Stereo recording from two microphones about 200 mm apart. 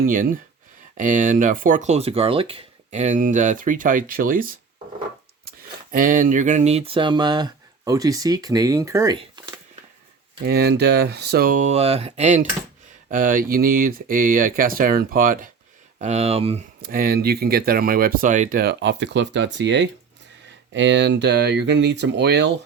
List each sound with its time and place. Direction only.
0.0 s speech: 45° right (ahead or behind); by 9.6 s 20° right (ahead or behind)
10.4 s speech: 55° right (ahead or behind)
16.0 s speech: 30° right (ahead or behind)
16.8 s speech: 45° right (ahead or behind)